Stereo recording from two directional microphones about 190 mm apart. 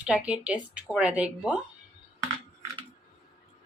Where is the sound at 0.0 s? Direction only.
5° right (ahead or behind).